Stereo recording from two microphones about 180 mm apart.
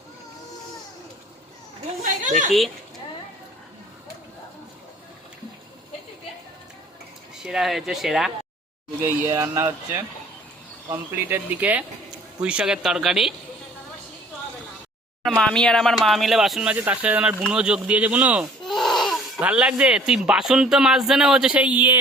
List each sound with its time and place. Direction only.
2.2 s a woman's voice: 45° right (ahead or behind)
7.4 s speech: centre (ahead or behind)
9.0 s speech: 15° right (ahead or behind)
15.2 s speech: 5° left (ahead or behind)